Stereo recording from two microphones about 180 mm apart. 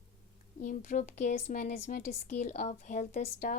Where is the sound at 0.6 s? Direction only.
45° left (ahead or behind).